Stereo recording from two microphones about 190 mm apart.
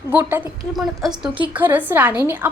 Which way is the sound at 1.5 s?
10° right (ahead or behind).